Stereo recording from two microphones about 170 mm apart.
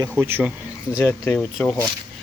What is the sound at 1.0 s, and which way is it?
Speech, 15° left (ahead or behind).